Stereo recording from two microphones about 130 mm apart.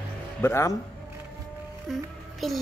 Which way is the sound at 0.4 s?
20° left (ahead or behind).